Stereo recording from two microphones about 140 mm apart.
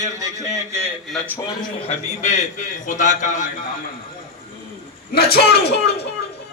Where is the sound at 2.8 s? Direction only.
60° left (ahead or behind).